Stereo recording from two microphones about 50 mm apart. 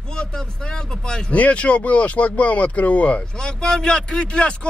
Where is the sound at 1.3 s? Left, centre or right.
Left.